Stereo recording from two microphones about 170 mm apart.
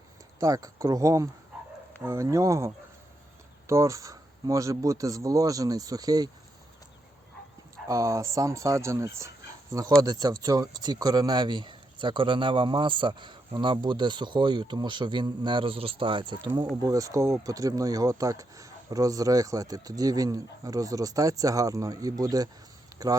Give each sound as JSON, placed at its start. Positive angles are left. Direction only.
{"t": 0.3, "sound": "speech", "side_deg": -20}
{"t": 7.9, "sound": "speech", "side_deg": -20}